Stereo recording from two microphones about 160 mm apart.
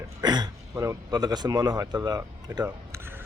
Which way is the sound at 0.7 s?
20° right (ahead or behind).